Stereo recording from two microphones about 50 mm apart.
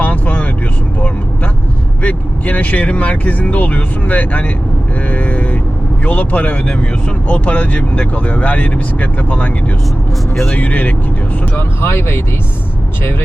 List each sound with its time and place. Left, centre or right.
0.0 s vehicle: left
2.0 s speech: left
10.5 s speech: left
11.5 s speech: left